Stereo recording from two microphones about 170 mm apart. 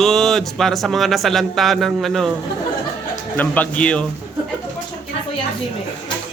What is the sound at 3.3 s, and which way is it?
Speech, 10° left (ahead or behind).